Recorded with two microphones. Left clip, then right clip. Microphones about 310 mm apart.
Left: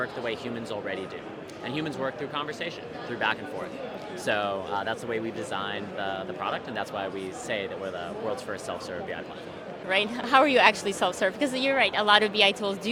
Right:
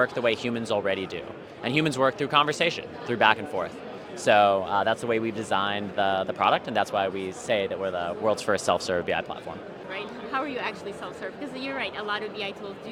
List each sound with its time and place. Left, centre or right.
0.0 s speech: right
4.3 s speech: right
8.4 s speech: right
9.9 s a woman's voice: left
12.0 s a woman's voice: left